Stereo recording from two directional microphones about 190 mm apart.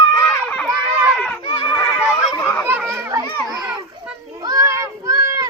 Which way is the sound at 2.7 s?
10° right (ahead or behind).